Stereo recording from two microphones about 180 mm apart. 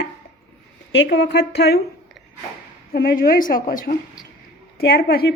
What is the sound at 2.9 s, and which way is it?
A woman's voice, 55° left (ahead or behind).